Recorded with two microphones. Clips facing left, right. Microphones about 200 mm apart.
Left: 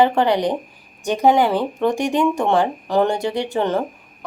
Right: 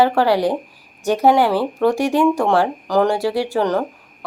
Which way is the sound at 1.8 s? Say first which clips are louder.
Right 3 dB; centre (ahead or behind).